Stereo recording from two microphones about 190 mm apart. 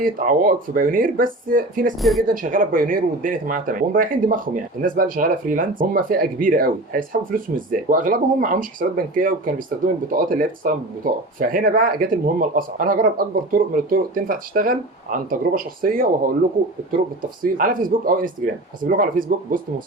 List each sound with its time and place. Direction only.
0.0 s speech: 45° right (ahead or behind)
2.0 s speech: centre (ahead or behind)
2.2 s speech: 45° right (ahead or behind)
17.4 s speech: 45° right (ahead or behind)